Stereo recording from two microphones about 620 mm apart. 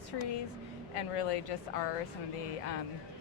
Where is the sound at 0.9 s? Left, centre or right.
Left.